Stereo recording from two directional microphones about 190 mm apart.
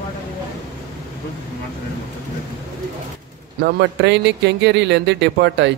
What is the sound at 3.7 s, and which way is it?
Speech, 65° right (ahead or behind).